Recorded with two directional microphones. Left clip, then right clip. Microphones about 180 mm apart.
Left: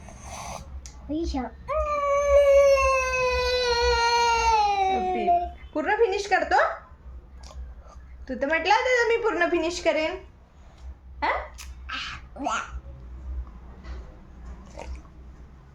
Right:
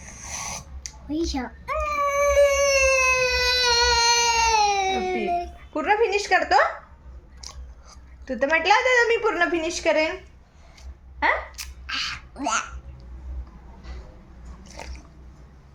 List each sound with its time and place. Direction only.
0.0 s a sound: 5° left (ahead or behind)
1.1 s baby cry: 5° left (ahead or behind)
5.7 s a woman's voice: 25° right (ahead or behind)
8.2 s a woman's voice: 25° right (ahead or behind)
11.2 s a woman's voice: 25° right (ahead or behind)
11.5 s a sound: 5° right (ahead or behind)
14.7 s biting: 5° left (ahead or behind)